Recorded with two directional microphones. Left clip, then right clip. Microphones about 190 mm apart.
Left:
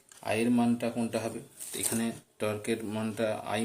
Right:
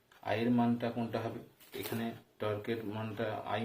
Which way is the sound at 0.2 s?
50° left (ahead or behind).